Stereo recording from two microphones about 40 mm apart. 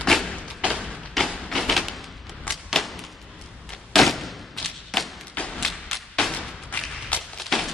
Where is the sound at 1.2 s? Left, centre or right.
Centre.